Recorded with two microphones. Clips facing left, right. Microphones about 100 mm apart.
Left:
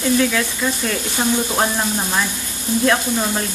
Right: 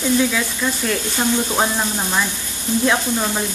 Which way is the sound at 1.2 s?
15° left (ahead or behind).